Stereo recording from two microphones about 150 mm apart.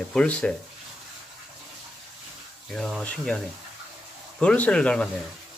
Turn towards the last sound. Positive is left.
turn(degrees=5)  # may be behind; listen again after turning